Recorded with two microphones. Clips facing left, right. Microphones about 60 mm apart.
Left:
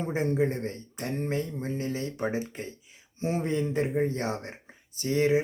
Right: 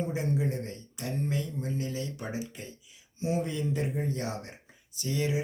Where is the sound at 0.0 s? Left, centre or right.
Left.